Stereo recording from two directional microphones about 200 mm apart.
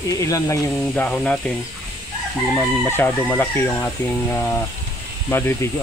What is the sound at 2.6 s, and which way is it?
Speech, 10° left (ahead or behind).